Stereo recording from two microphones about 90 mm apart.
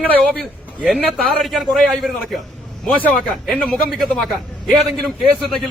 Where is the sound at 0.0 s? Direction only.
15° left (ahead or behind).